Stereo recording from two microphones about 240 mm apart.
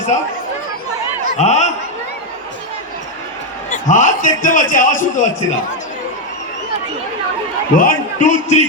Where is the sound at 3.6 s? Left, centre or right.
Left.